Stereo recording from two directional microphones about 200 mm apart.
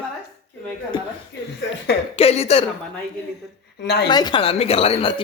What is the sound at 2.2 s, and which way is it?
Speech, 30° left (ahead or behind).